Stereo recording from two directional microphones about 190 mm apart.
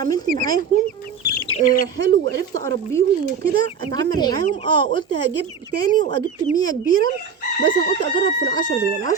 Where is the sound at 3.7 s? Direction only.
20° left (ahead or behind).